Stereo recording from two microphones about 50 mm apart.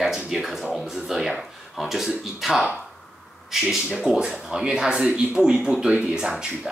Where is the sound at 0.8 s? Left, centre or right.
Centre.